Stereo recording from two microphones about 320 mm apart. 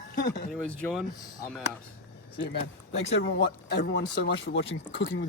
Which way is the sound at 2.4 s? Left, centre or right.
Left.